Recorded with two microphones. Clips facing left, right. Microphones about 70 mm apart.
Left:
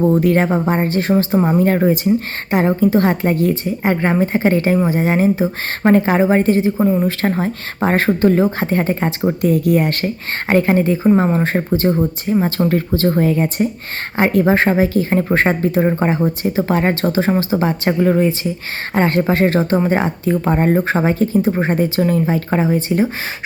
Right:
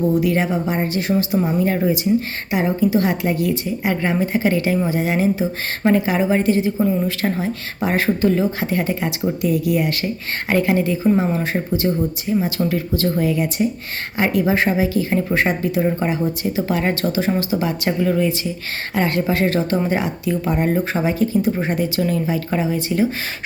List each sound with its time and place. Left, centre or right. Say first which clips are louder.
0.0 s a woman's voice: left 4 dB; left